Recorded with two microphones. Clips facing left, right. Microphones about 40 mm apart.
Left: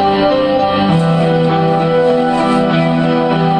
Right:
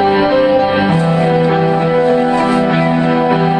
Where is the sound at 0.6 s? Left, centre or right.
Centre.